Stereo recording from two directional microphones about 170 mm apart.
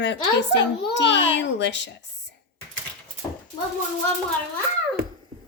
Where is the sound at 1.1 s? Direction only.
90° left.